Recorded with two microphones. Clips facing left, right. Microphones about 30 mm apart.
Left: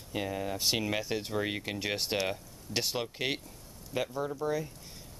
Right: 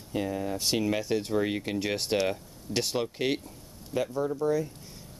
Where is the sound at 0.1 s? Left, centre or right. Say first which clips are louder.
Right 3 dB; centre.